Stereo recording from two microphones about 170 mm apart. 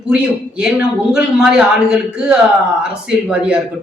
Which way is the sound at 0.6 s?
5° right (ahead or behind).